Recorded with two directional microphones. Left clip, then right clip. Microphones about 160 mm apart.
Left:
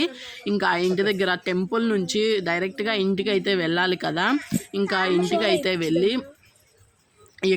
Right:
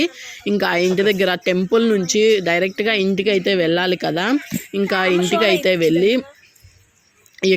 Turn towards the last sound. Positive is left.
turn(degrees=-15)  # may be behind; listen again after turning